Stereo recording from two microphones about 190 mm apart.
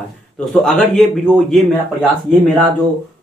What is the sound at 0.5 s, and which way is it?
Speech, centre (ahead or behind).